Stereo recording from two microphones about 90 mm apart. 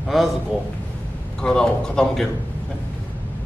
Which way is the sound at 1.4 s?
10° left (ahead or behind).